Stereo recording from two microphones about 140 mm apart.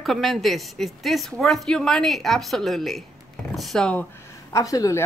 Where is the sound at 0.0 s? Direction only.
Centre (ahead or behind).